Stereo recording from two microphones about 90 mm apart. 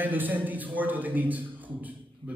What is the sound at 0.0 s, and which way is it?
A man's voice, 20° right (ahead or behind).